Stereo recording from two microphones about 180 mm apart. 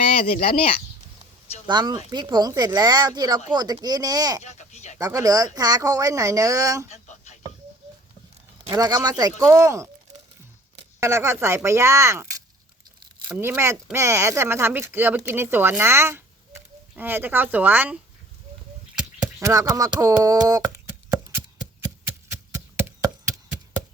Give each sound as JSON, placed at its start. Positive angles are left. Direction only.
{"t": 0.3, "sound": "speech", "side_deg": 30}
{"t": 1.6, "sound": "speech", "side_deg": -25}
{"t": 4.5, "sound": "speech", "side_deg": 40}
{"t": 4.9, "sound": "speech", "side_deg": -20}
{"t": 6.8, "sound": "a sound", "side_deg": 40}
{"t": 8.7, "sound": "speech", "side_deg": -20}
{"t": 11.0, "sound": "speech", "side_deg": -15}
{"t": 18.9, "sound": "a sound", "side_deg": -10}
{"t": 22.5, "sound": "a sound", "side_deg": -15}